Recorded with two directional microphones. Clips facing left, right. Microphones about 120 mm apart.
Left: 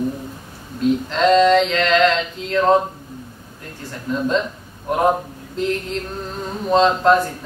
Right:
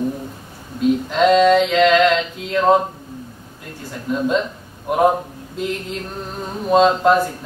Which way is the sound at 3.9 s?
5° right (ahead or behind).